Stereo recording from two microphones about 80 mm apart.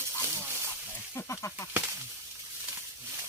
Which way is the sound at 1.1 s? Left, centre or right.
Left.